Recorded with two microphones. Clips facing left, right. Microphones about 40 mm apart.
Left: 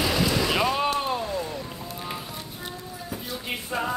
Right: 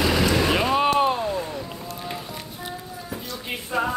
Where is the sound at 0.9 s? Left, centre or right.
Centre.